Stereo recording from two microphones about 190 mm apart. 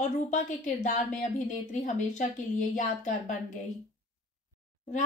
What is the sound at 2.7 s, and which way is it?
Speech, 40° left (ahead or behind).